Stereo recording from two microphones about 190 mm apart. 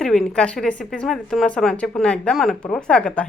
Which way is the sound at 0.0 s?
5° left (ahead or behind).